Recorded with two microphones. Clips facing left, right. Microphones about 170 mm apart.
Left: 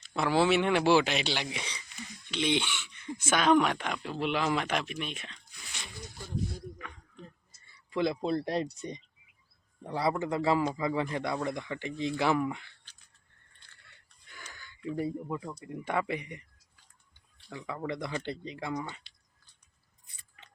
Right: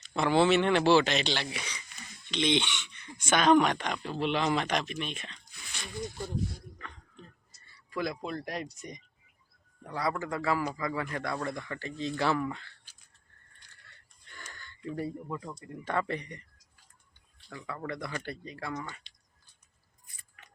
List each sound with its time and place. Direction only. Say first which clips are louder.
0.0 s speech: right 2 dB; 5° left (ahead or behind)
1.5 s speech: even; 30° left (ahead or behind)
2.0 s speech: right 1 dB; 10° left (ahead or behind)
7.6 s speech: left 4 dB; 25° left (ahead or behind)
13.8 s wheeze: right 1 dB; 10° left (ahead or behind)
14.8 s speech: left 2 dB; 15° left (ahead or behind)
17.5 s speech: left 2 dB; 20° left (ahead or behind)